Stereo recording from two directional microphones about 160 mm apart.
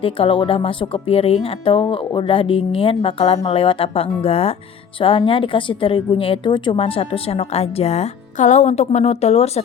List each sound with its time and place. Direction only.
0.0 s a woman's voice: 35° left (ahead or behind)